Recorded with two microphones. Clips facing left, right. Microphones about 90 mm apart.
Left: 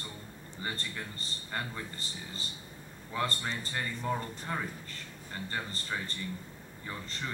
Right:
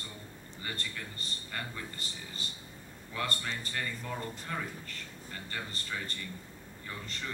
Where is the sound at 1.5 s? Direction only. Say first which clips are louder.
Left 3 dB; 25° left (ahead or behind).